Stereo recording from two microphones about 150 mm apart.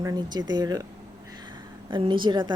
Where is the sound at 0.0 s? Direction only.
25° right (ahead or behind).